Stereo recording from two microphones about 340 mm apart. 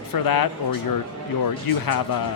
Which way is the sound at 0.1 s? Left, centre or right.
Left.